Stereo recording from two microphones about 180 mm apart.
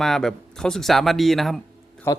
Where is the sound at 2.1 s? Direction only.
15° left (ahead or behind).